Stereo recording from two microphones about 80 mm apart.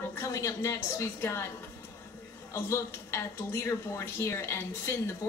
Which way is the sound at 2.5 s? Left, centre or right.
Left.